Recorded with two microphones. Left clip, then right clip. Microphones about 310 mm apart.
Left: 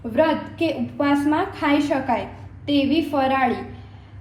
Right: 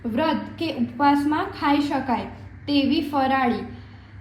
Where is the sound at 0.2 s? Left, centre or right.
Centre.